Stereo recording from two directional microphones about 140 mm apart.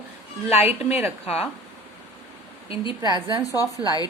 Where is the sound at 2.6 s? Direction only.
40° left (ahead or behind).